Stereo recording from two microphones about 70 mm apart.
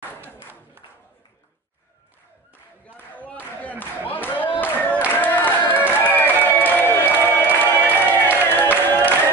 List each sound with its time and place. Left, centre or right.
3.0 s clapping: left
3.8 s a sound: left
6.6 s crowd: left
8.1 s music: left